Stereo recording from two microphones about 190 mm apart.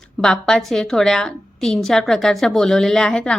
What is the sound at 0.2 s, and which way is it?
A woman's voice, 5° left (ahead or behind).